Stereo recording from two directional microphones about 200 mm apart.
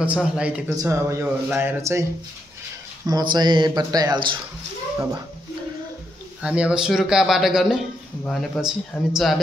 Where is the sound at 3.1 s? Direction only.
20° right (ahead or behind).